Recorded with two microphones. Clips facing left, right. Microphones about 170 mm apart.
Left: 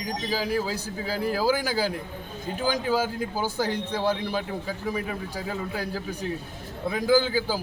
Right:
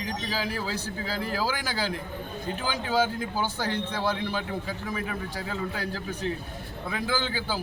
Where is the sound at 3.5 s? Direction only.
10° left (ahead or behind).